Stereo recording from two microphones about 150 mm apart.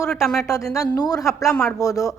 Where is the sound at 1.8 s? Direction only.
20° left (ahead or behind).